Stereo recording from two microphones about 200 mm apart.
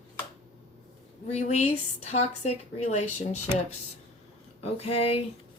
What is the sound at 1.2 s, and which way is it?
Speech, 35° left (ahead or behind).